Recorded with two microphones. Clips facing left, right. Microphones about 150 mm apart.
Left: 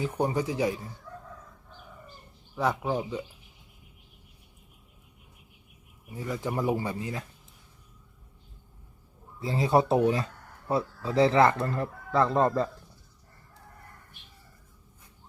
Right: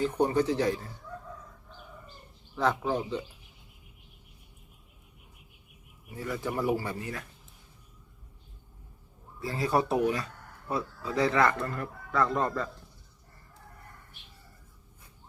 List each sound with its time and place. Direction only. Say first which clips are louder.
0.0 s speech: right 2 dB; 10° left (ahead or behind)
2.6 s speech: even; 10° left (ahead or behind)
6.1 s speech: left 1 dB; 15° left (ahead or behind)
9.4 s speech: left 4 dB; 25° left (ahead or behind)